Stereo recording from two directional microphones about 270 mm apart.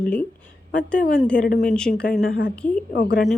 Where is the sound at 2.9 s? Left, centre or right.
Left.